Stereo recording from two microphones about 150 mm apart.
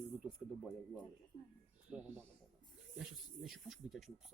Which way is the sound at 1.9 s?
5° right (ahead or behind).